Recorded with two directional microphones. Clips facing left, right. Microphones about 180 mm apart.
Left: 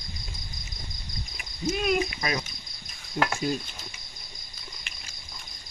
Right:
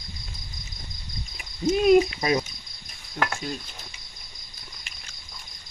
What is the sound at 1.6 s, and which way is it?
Speech, 30° right (ahead or behind).